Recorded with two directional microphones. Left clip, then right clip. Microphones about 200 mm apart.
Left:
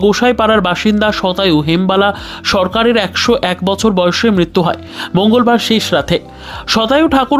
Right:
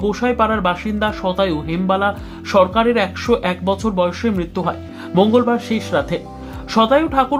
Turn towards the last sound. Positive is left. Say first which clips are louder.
# left 4 dB
turn(degrees=40)  # may be behind; listen again after turning